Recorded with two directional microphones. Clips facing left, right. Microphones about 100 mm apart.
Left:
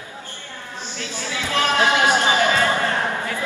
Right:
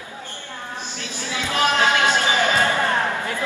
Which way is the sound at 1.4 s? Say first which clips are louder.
Right 1 dB; 15° right (ahead or behind).